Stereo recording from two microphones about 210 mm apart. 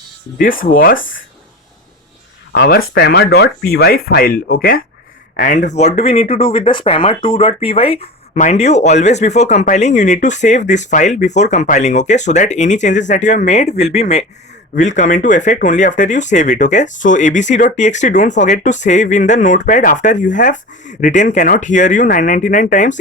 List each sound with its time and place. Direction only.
0.3 s speech: 40° left (ahead or behind)
2.5 s speech: 50° left (ahead or behind)